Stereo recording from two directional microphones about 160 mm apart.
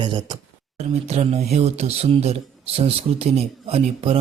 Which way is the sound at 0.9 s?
40° right (ahead or behind).